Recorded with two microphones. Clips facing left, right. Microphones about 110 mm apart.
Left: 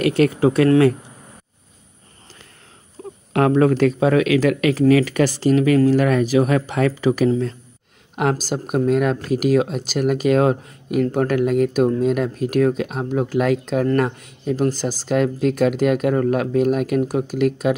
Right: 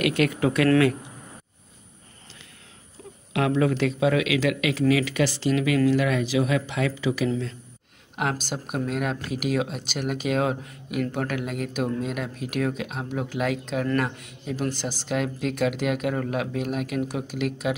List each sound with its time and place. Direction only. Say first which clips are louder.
0.0 s speech: left 6 dB; 35° left (ahead or behind)
3.0 s a sound: left 9 dB; 40° left (ahead or behind)
3.3 s speech: left 7 dB; 45° left (ahead or behind)